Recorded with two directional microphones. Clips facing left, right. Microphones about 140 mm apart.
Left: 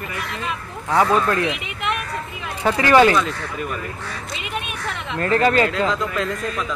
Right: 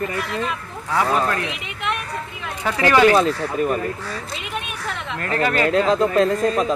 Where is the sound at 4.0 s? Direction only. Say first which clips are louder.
Right 1 dB; centre (ahead or behind).